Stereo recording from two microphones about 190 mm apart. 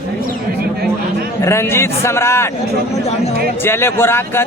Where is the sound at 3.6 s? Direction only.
10° left (ahead or behind).